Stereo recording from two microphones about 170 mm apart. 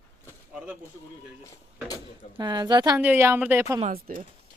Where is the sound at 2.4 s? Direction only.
25° right (ahead or behind).